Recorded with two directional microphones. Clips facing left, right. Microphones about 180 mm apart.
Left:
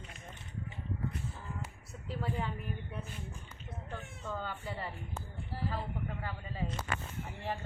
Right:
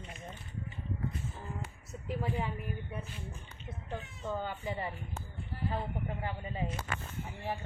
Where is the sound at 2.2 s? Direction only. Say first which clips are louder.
Even; 10° right (ahead or behind).